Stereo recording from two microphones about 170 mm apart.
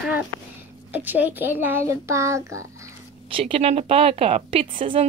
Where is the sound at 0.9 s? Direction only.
10° right (ahead or behind).